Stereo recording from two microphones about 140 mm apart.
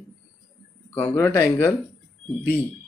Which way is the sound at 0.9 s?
15° left (ahead or behind).